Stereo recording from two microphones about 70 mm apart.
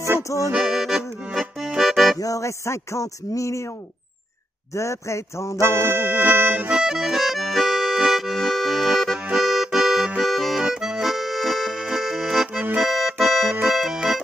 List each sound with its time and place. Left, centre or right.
0.6 s accordion: centre
2.1 s music: left
4.7 s music: left
5.6 s accordion: right
6.7 s accordion: centre
7.0 s accordion: centre
12.7 s music: centre